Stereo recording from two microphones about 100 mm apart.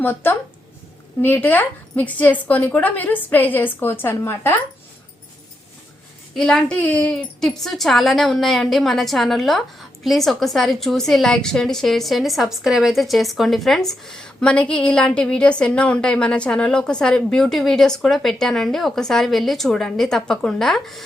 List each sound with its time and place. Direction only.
0.0 s a woman's voice: 20° left (ahead or behind)
6.3 s a woman's voice: 5° left (ahead or behind)